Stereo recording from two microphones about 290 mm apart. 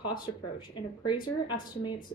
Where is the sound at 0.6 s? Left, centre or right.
Centre.